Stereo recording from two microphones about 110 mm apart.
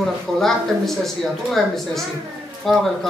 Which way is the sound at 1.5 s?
Centre (ahead or behind).